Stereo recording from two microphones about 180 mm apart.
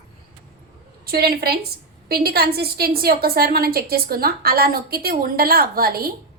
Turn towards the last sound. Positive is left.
turn(degrees=-55)  # may be behind; listen again after turning